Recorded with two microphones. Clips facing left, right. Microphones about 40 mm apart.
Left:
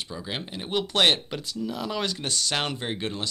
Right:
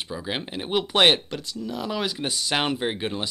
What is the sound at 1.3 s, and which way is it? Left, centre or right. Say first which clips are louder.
Speech: even; centre.